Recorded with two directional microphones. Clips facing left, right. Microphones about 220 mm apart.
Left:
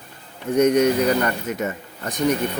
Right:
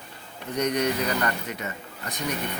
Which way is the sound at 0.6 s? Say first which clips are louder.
Left 9 dB; 45° left (ahead or behind).